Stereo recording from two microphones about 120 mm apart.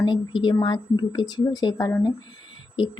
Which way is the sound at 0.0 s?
40° left (ahead or behind).